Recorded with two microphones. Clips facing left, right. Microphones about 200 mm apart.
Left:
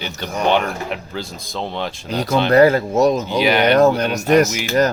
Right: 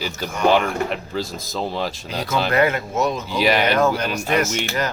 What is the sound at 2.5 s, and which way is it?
Speech, 35° left (ahead or behind).